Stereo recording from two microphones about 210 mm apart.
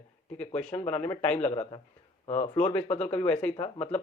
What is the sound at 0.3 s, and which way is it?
Speech, 5° left (ahead or behind).